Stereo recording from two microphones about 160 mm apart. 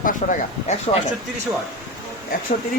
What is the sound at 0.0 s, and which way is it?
Speech, 55° left (ahead or behind).